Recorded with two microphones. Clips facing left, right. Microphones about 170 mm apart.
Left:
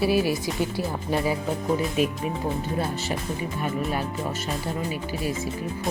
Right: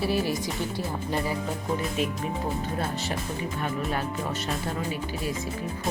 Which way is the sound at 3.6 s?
5° left (ahead or behind).